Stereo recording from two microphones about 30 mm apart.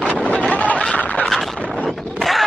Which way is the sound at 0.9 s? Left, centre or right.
Left.